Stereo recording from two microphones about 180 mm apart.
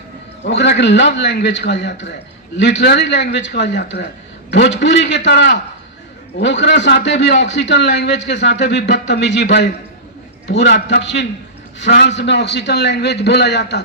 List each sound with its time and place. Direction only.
0.4 s a man's voice: 75° left (ahead or behind)